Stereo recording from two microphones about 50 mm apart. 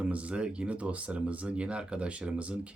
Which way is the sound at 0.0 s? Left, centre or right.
Right.